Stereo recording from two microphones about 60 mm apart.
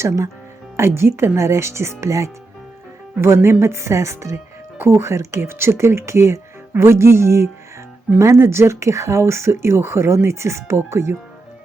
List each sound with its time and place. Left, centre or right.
0.8 s speech: right
3.2 s speech: right
4.8 s speech: right